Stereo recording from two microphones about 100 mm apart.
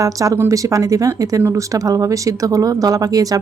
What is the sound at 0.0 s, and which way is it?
Speech, 35° right (ahead or behind).